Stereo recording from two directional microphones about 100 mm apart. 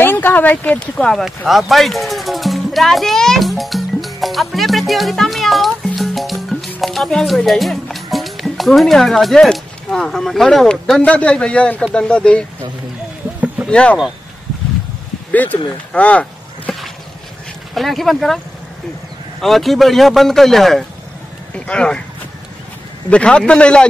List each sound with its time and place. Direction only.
0.0 s speech: 20° left (ahead or behind)
1.2 s music: 5° right (ahead or behind)
6.8 s a man's voice: centre (ahead or behind)
13.7 s speech: 10° left (ahead or behind)
15.3 s a man's voice: 15° left (ahead or behind)
15.9 s a sound: 15° left (ahead or behind)
17.7 s speech: centre (ahead or behind)
19.4 s a man's voice: centre (ahead or behind)
23.0 s a man's voice: 10° left (ahead or behind)